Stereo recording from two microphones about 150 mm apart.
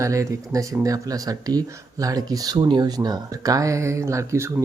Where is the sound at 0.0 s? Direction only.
20° right (ahead or behind).